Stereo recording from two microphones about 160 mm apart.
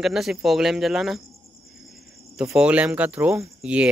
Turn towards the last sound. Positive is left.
turn(degrees=-5)  # may be behind; listen again after turning